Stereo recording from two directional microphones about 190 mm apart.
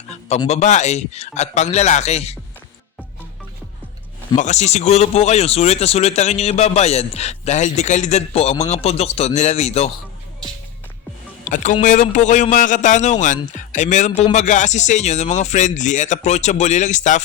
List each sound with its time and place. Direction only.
0.4 s speech: 35° left (ahead or behind)
4.4 s speech: 35° left (ahead or behind)
11.4 s speech: 40° left (ahead or behind)